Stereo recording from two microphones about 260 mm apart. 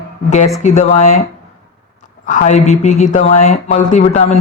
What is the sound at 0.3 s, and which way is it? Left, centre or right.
Speech, left.